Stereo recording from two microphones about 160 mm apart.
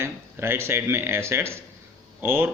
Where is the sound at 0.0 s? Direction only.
15° right (ahead or behind).